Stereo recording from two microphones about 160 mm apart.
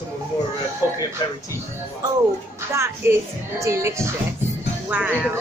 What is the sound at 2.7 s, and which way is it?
Speech, 15° right (ahead or behind).